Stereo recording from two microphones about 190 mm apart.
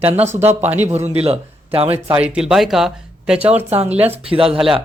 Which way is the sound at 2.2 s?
5° right (ahead or behind).